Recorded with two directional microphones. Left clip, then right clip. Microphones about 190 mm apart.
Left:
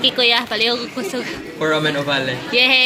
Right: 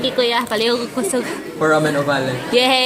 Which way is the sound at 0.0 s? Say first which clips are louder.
Left 2 dB; 5° right (ahead or behind).